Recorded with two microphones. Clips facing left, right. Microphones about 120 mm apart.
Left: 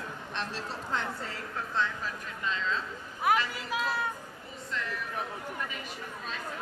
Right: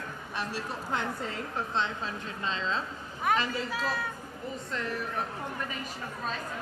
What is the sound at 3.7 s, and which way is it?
Speech, 20° left (ahead or behind).